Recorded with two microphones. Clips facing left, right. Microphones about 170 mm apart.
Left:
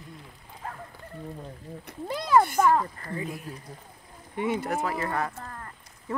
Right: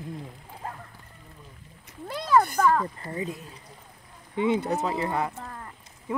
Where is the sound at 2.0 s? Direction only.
10° left (ahead or behind).